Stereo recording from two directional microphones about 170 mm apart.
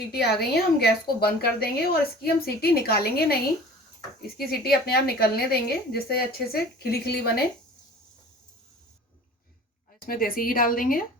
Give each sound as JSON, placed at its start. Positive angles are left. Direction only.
{"t": 0.1, "sound": "a woman's voice", "side_deg": 65}
{"t": 4.4, "sound": "a woman's voice", "side_deg": 65}
{"t": 10.1, "sound": "a woman's voice", "side_deg": 60}